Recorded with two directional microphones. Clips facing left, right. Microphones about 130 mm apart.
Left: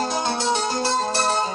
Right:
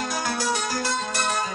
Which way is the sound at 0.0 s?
25° left (ahead or behind).